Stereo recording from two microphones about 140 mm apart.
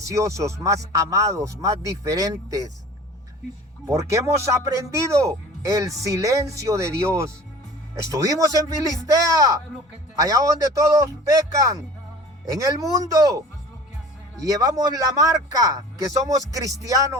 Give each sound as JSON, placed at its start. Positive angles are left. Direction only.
{"t": 0.1, "sound": "speech", "side_deg": -20}
{"t": 3.8, "sound": "speech", "side_deg": -20}
{"t": 14.4, "sound": "speech", "side_deg": -25}